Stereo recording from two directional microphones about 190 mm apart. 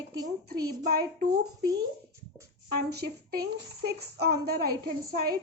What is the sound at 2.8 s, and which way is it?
A woman's voice, 55° right (ahead or behind).